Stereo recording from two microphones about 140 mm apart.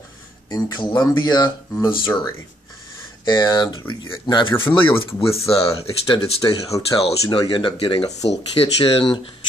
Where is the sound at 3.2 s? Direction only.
30° left (ahead or behind).